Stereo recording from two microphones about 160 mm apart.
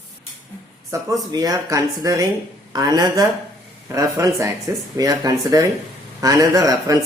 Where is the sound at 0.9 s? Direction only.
20° right (ahead or behind).